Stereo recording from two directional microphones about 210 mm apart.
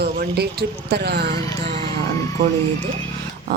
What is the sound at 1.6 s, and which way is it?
Music, 35° right (ahead or behind).